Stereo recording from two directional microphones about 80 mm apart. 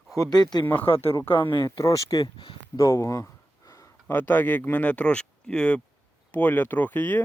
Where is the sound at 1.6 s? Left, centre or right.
Left.